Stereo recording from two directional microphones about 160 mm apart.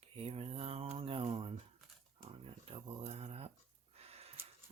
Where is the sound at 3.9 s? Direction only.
40° right (ahead or behind).